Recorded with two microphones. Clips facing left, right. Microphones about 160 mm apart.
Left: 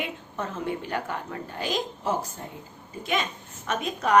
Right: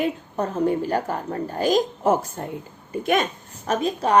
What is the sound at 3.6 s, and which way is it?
Speech, 35° right (ahead or behind).